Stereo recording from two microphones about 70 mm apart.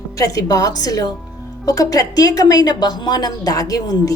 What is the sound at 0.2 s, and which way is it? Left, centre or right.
A woman's voice, left.